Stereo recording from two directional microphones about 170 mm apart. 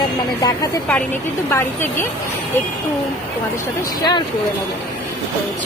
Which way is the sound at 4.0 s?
25° left (ahead or behind).